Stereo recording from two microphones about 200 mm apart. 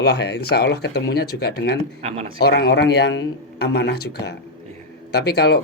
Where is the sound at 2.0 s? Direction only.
30° right (ahead or behind).